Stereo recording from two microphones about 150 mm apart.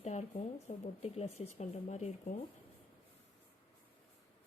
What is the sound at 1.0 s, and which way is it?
A woman's voice, 45° left (ahead or behind).